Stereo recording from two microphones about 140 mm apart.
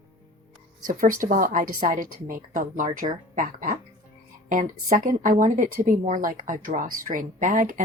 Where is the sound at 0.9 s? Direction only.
70° right (ahead or behind).